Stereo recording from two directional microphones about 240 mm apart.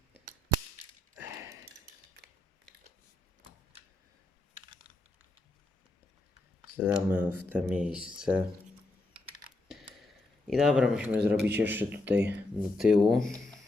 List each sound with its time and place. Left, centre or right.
1.2 s a sound: centre
2.2 s mechanisms: right
6.7 s a man's voice: centre
9.6 s a sound: centre
11.2 s a man's voice: right
11.5 s a man's voice: centre